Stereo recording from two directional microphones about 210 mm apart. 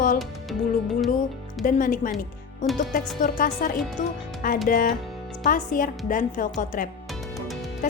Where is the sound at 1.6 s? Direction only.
40° left (ahead or behind).